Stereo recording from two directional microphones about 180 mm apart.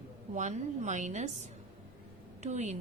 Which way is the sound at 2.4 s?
40° right (ahead or behind).